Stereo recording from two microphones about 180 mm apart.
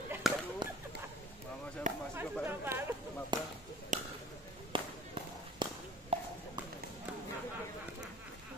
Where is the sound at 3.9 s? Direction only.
45° right (ahead or behind).